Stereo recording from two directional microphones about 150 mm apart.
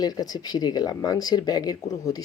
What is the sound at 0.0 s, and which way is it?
Speech, 25° left (ahead or behind).